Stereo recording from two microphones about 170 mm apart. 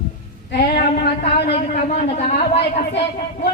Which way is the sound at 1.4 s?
70° left (ahead or behind).